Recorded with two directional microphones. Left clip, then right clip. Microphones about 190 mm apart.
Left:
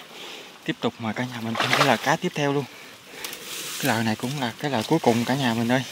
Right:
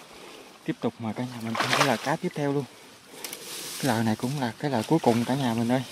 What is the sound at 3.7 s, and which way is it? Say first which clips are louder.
Speech: left 2 dB; 15° right (ahead or behind).